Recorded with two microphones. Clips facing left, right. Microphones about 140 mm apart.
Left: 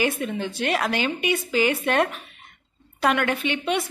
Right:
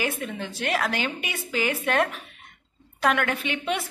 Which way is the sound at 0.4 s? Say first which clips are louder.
Left 1 dB; 5° left (ahead or behind).